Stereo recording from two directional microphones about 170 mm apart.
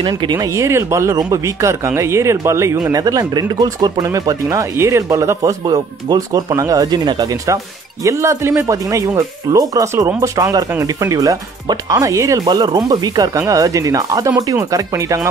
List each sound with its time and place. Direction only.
0.0 s speech: 25° right (ahead or behind)